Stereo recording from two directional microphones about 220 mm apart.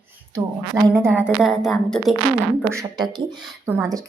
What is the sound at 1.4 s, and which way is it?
Speech, centre (ahead or behind).